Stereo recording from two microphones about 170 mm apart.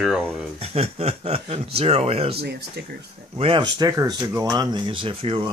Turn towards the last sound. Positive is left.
turn(degrees=-35)  # may be behind; listen again after turning